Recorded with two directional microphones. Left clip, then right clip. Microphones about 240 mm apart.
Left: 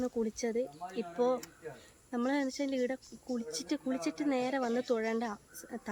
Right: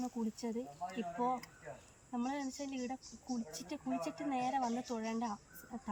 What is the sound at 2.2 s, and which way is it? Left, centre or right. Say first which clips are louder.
A woman's voice: left 9 dB; centre.